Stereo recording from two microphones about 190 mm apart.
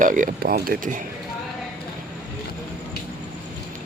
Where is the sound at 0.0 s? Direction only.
45° right (ahead or behind).